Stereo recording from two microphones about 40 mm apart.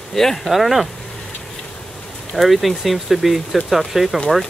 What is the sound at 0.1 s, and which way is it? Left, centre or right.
Speech, centre.